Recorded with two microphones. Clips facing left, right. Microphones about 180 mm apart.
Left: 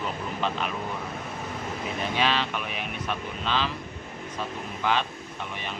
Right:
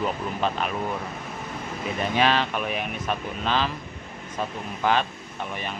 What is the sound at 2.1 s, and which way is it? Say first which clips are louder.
Speech: right 4 dB; 45° right (ahead or behind).